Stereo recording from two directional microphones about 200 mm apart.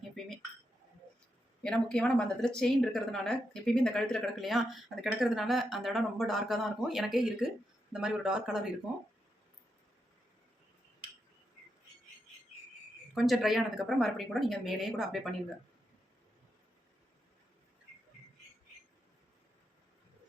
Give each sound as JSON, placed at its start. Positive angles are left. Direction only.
{"t": 0.2, "sound": "dishes", "side_deg": 0}
{"t": 1.6, "sound": "speech", "side_deg": 5}
{"t": 13.1, "sound": "speech", "side_deg": 0}